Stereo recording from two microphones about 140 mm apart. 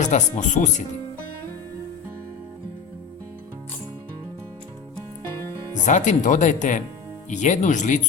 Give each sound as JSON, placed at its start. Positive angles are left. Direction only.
{"t": 0.0, "sound": "speech", "side_deg": 60}
{"t": 5.8, "sound": "speech", "side_deg": 60}